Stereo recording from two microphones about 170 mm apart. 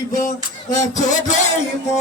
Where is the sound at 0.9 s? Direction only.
45° left (ahead or behind).